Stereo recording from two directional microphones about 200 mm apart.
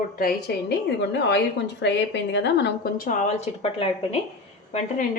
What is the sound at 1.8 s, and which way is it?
A woman's voice, 60° left (ahead or behind).